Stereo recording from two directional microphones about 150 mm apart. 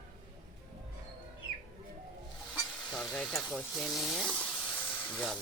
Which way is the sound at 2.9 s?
5° left (ahead or behind).